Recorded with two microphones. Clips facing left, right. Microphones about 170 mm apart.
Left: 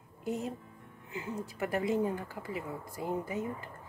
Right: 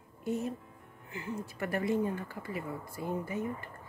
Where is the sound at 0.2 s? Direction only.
15° left (ahead or behind).